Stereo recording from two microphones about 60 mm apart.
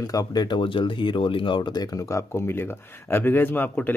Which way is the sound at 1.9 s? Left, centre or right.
Left.